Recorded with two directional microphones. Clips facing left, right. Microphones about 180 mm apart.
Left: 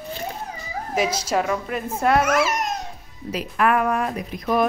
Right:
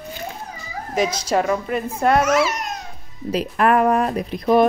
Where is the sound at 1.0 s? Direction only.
5° left (ahead or behind).